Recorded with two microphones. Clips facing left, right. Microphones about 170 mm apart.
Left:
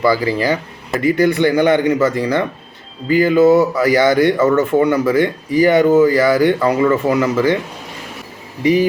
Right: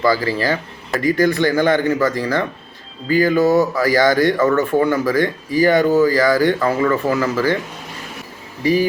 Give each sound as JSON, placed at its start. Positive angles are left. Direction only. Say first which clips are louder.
{"t": 0.0, "sound": "speech", "louder": "left 2 dB", "side_deg": 15}
{"t": 8.6, "sound": "speech", "louder": "left 3 dB", "side_deg": 20}